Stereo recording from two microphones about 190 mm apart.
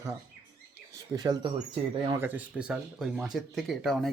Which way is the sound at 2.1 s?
10° right (ahead or behind).